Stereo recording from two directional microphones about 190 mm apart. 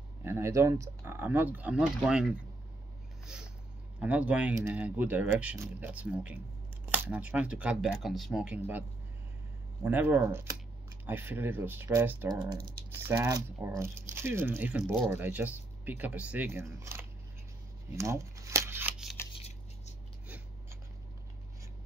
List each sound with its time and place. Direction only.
0.2 s speech: 15° right (ahead or behind)
4.0 s speech: 5° right (ahead or behind)
9.8 s speech: 10° right (ahead or behind)
12.3 s speech: 20° right (ahead or behind)
17.9 s shuffling cards: 15° right (ahead or behind)